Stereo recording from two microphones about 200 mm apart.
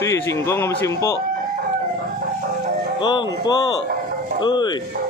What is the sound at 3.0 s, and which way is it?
Speech, 20° left (ahead or behind).